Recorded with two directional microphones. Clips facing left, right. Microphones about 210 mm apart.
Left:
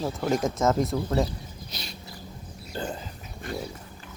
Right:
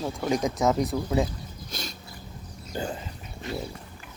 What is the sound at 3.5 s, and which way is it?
Pig, 50° left (ahead or behind).